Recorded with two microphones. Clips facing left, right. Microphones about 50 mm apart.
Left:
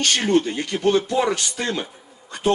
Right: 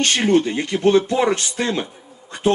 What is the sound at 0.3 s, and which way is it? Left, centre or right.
Speech, right.